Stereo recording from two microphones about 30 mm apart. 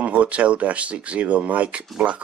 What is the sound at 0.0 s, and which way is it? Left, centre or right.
Speech, right.